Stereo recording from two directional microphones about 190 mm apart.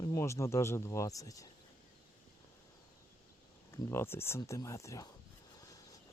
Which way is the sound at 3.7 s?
15° left (ahead or behind).